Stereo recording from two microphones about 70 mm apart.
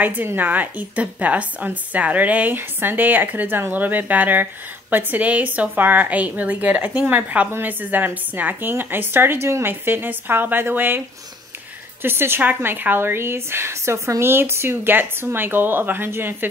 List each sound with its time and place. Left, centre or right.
0.0 s a woman's voice: right
12.0 s a woman's voice: right